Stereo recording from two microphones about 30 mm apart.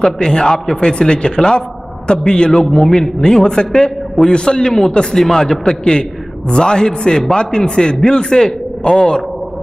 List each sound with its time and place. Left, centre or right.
0.2 s a man's voice: left
2.6 s a man's voice: centre
2.9 s a man's voice: centre